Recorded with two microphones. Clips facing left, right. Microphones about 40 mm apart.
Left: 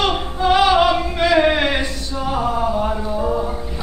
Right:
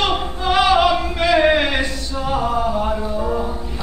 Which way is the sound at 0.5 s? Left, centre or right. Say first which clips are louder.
Left 1 dB; centre.